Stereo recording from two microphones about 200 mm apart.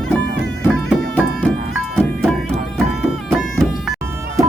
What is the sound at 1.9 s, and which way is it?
Music, centre (ahead or behind).